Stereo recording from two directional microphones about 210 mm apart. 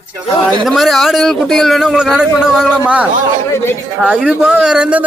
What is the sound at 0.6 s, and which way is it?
A man's voice, centre (ahead or behind).